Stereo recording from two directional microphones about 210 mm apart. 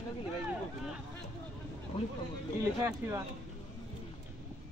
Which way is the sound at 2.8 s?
10° right (ahead or behind).